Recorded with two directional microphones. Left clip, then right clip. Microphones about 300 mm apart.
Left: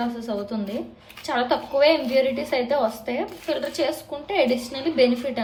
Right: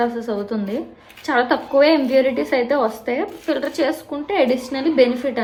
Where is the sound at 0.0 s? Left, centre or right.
Centre.